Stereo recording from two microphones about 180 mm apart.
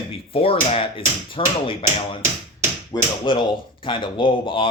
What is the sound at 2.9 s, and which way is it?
Speech, 25° left (ahead or behind).